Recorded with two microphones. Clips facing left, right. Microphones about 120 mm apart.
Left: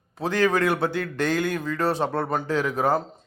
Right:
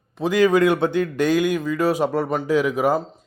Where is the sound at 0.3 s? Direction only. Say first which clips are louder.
Right 5 dB; 15° right (ahead or behind).